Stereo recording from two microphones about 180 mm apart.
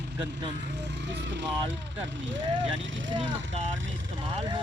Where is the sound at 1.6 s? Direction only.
90° right.